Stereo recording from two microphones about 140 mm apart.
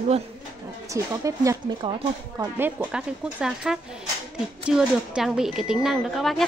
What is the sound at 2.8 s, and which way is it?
Speech, 5° right (ahead or behind).